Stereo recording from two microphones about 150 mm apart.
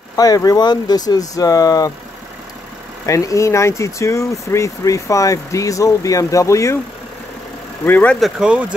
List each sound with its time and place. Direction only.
0.1 s speech: 25° left (ahead or behind)
3.1 s speech: 20° left (ahead or behind)
7.8 s speech: 10° left (ahead or behind)
8.2 s speech: 5° right (ahead or behind)